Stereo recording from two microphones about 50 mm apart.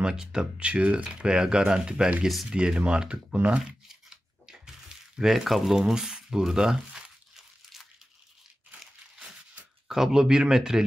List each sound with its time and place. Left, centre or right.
0.0 s speech: centre
3.9 s a sound: centre
5.8 s speech: centre
9.8 s speech: centre